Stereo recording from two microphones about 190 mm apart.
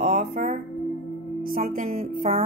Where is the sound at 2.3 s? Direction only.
35° right (ahead or behind).